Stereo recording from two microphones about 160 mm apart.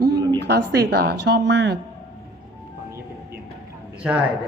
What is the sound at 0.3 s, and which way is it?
Speech, 90° right.